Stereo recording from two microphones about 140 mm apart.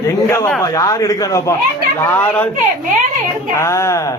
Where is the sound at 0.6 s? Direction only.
25° left (ahead or behind).